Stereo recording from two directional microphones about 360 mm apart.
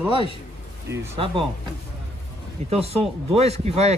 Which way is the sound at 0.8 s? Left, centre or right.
Centre.